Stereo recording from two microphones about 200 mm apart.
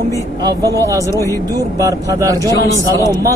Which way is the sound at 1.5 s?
15° right (ahead or behind).